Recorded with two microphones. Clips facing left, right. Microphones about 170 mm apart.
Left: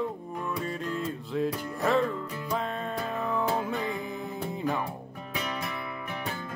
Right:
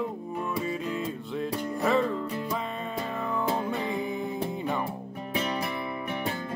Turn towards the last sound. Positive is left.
turn(degrees=-30)  # may be behind; listen again after turning